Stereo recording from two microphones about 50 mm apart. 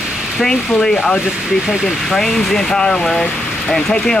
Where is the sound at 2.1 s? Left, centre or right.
Centre.